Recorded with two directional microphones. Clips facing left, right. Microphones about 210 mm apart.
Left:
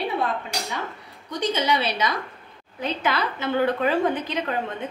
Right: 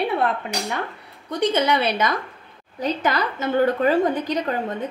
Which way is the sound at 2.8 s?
40° right (ahead or behind).